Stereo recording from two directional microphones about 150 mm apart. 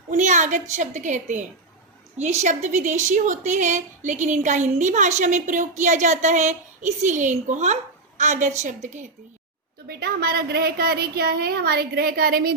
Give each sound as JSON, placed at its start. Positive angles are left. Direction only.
{"t": 0.1, "sound": "a woman's voice", "side_deg": -55}
{"t": 9.8, "sound": "a woman's voice", "side_deg": -90}